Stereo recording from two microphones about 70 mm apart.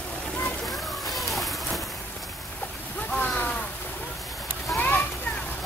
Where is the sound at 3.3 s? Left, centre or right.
Left.